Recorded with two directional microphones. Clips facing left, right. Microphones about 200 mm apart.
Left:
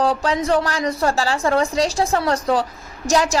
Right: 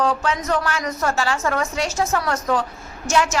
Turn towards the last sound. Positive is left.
turn(degrees=35)  # may be behind; listen again after turning